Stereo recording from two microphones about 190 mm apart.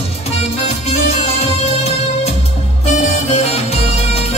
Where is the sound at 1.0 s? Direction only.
35° left (ahead or behind).